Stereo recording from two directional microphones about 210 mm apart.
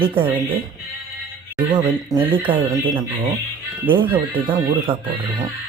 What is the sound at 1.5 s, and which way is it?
Speech, 20° right (ahead or behind).